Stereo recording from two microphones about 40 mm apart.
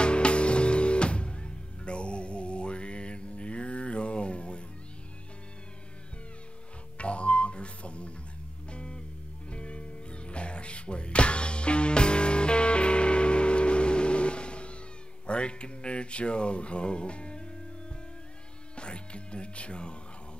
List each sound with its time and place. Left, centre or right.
0.0 s music: left
7.0 s music: left
15.2 s a sound: left
18.8 s music: left